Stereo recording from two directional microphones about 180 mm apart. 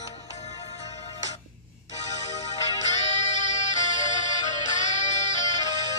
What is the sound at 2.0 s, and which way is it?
Music, 40° left (ahead or behind).